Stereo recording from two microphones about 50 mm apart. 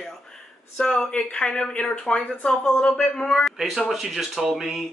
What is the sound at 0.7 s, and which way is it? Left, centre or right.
A woman's voice, left.